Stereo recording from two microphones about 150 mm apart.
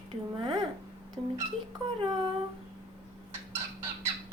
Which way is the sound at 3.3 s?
15° right (ahead or behind).